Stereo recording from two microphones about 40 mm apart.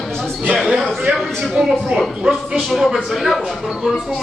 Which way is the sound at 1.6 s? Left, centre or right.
Right.